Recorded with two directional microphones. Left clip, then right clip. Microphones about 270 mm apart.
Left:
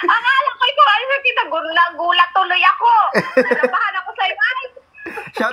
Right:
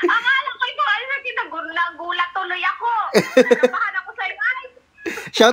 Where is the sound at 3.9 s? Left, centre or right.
Left.